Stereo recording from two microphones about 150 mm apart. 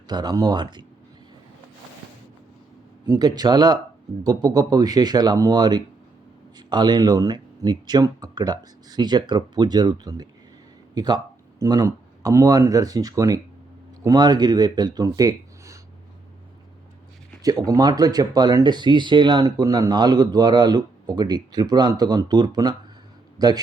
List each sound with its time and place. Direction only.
0.1 s speech: 25° right (ahead or behind)
3.1 s speech: 25° right (ahead or behind)
17.7 s speech: 25° right (ahead or behind)